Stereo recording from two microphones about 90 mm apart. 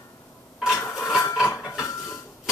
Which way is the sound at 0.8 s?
25° left (ahead or behind).